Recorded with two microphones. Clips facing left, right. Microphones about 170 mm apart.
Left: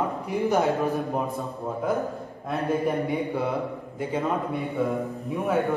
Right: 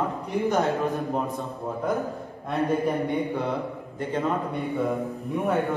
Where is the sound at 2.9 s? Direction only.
Centre (ahead or behind).